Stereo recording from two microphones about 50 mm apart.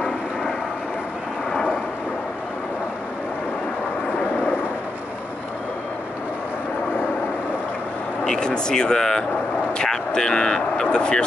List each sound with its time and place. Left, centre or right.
8.2 s speech: centre